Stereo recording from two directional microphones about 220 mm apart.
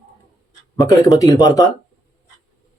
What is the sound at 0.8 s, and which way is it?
Speech, 15° left (ahead or behind).